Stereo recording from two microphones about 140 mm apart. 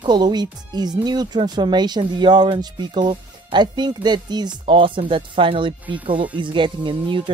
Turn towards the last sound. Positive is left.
turn(degrees=-35)  # may be behind; listen again after turning